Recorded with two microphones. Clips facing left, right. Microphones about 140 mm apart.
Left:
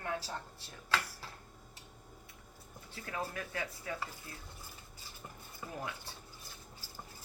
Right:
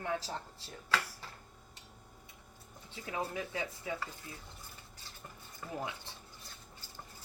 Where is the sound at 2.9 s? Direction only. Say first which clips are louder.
Right 2 dB; 15° right (ahead or behind).